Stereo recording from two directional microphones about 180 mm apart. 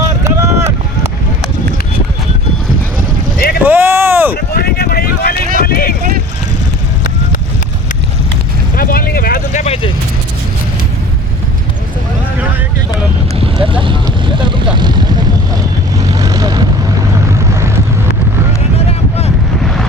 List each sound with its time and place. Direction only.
0.3 s run: 15° right (ahead or behind)
3.6 s vehicle: 10° right (ahead or behind)
4.4 s vehicle: 60° left (ahead or behind)
6.0 s vehicle: 55° right (ahead or behind)
8.7 s vehicle: 55° left (ahead or behind); by 9.9 s 35° left (ahead or behind)
13.4 s vehicle: 30° right (ahead or behind)
18.9 s boat: 35° left (ahead or behind)
19.6 s vehicle: centre (ahead or behind)